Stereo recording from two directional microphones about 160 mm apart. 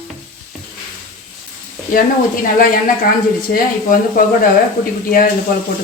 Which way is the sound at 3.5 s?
65° left (ahead or behind).